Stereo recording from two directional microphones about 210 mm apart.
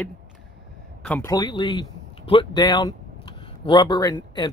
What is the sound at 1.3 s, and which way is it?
Speech, 20° left (ahead or behind).